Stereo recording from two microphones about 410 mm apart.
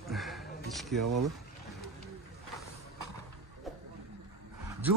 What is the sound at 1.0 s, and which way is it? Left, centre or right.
Speech, right.